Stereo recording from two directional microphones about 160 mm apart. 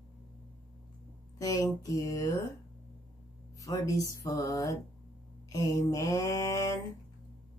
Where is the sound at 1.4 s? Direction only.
20° left (ahead or behind).